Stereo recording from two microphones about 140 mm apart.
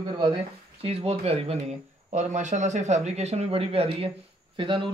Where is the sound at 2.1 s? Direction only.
55° right (ahead or behind); by 4.9 s 35° right (ahead or behind).